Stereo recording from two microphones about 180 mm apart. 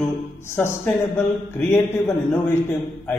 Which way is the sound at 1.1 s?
15° left (ahead or behind).